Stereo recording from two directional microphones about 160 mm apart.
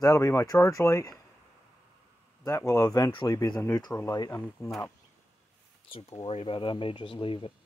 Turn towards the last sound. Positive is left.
turn(degrees=30)  # may be behind; listen again after turning